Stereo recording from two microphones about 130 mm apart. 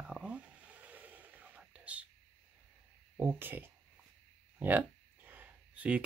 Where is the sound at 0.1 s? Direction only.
10° right (ahead or behind).